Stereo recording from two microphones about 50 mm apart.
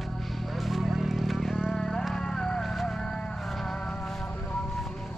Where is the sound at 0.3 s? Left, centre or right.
Centre.